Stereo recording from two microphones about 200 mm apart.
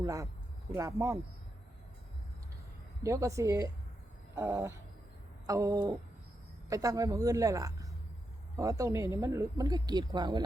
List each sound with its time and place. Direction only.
0.0 s a woman's voice: 15° right (ahead or behind)
3.0 s a woman's voice: 15° right (ahead or behind)